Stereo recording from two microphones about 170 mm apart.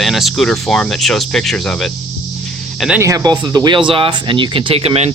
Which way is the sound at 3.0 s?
20° right (ahead or behind).